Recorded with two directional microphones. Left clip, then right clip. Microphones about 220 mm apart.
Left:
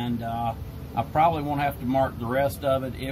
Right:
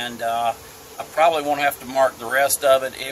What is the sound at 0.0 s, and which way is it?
Speech, 35° right (ahead or behind).